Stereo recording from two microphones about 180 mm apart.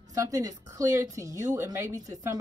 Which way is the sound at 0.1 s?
20° right (ahead or behind).